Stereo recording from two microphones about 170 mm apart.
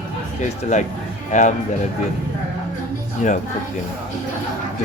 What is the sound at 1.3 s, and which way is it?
Speech, 45° left (ahead or behind).